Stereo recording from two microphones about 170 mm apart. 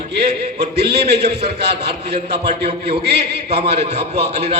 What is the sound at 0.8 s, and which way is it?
Speech, 75° right (ahead or behind).